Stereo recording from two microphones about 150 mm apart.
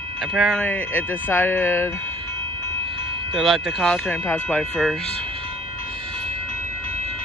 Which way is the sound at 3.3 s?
Centre (ahead or behind).